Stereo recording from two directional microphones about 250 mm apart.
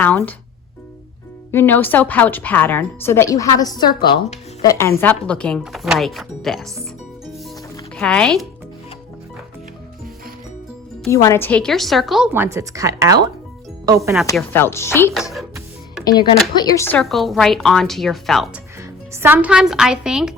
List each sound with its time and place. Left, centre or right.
0.0 s a woman's voice: centre
1.5 s a woman's voice: centre
7.9 s a woman's voice: centre
11.1 s a woman's voice: centre
14.3 s a woman's voice: centre
16.6 s a woman's voice: centre